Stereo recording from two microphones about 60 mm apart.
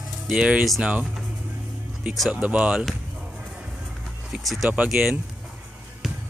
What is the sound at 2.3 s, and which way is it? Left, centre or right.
Speech, right.